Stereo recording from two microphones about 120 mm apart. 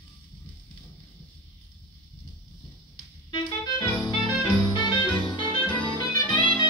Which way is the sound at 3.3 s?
40° left (ahead or behind).